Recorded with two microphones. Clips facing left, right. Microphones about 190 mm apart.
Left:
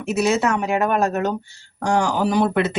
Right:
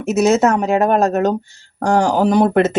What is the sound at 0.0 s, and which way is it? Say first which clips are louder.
Speech: right 6 dB; 45° right (ahead or behind).